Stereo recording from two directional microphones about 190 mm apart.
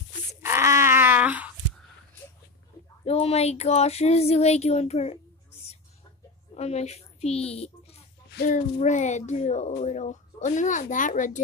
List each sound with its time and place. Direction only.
0.4 s a sound: 15° right (ahead or behind)
3.1 s child singing: 30° left (ahead or behind)
6.5 s a woman's voice: 35° left (ahead or behind)